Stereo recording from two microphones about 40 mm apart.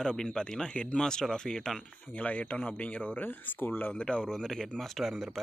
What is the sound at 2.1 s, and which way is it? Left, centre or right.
Speech, left.